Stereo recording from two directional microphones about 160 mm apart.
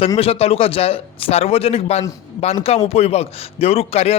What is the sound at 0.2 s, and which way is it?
A man's voice, 40° left (ahead or behind).